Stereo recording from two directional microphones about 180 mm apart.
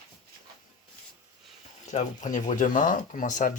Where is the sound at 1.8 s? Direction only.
40° left (ahead or behind).